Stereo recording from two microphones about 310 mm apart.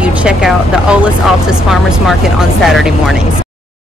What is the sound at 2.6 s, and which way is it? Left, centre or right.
Speech, centre.